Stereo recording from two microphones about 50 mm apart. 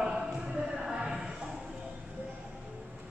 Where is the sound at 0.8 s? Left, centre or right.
Centre.